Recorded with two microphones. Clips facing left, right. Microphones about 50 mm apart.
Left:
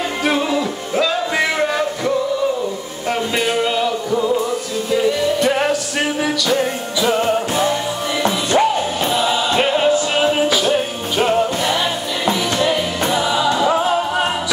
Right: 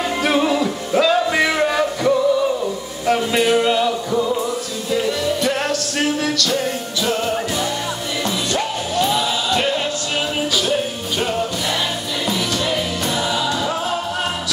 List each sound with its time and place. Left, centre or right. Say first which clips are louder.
0.2 s music: right 1 dB; centre
5.5 s music: left 3 dB; centre